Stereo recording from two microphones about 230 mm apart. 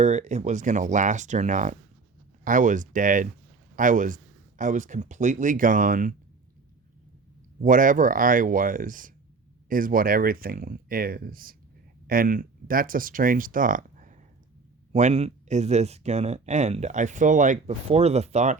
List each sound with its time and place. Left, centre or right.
0.0 s speech: right
7.6 s speech: right